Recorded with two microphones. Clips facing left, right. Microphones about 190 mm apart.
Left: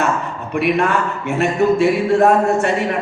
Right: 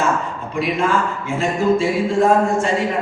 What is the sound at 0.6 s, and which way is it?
Speech, 65° left (ahead or behind).